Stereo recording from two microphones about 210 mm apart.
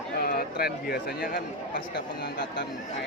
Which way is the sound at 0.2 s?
45° left (ahead or behind).